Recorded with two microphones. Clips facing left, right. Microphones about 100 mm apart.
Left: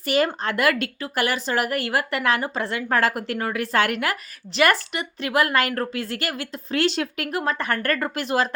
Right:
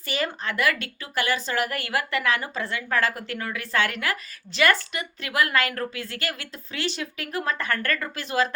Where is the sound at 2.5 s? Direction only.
60° left (ahead or behind).